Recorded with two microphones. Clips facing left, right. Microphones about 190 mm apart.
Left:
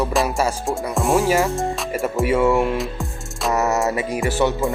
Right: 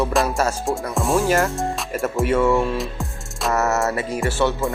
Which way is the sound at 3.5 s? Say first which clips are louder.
Left 1 dB; 15° left (ahead or behind).